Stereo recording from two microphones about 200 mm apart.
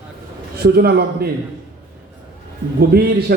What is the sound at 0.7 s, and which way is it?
Speech, 50° right (ahead or behind).